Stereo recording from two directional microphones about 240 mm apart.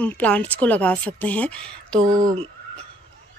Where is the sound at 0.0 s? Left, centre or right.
Centre.